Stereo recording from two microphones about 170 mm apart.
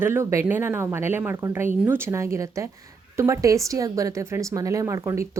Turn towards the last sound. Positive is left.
turn(degrees=-15)  # may be behind; listen again after turning